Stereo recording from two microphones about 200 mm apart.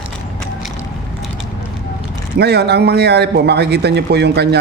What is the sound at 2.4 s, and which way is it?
A man's voice, 55° right (ahead or behind).